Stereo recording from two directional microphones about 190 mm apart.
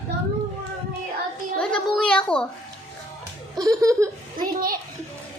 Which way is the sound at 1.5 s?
5° left (ahead or behind).